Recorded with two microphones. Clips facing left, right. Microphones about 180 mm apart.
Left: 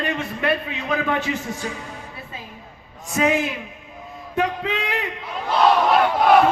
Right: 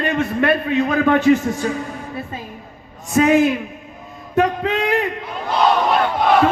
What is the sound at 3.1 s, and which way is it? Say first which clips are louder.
A man's voice: right 7 dB; 50° right (ahead or behind).